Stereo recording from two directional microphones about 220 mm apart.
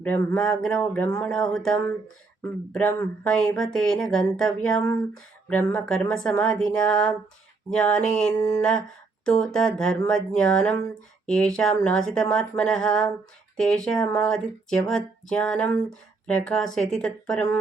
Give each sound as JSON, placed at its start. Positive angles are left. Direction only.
{"t": 0.0, "sound": "speech", "side_deg": 5}
{"t": 8.4, "sound": "a sound", "side_deg": 15}
{"t": 9.2, "sound": "speech", "side_deg": 5}